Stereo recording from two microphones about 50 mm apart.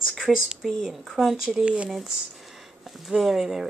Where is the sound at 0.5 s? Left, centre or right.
Centre.